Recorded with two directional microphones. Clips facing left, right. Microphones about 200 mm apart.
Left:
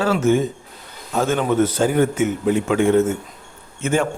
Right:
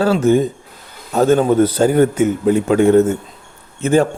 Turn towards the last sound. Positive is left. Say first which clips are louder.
# right 6 dB
turn(degrees=-35)  # may be behind; listen again after turning